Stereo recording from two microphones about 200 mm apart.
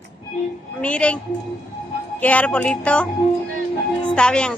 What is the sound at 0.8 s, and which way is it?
Music, 5° left (ahead or behind).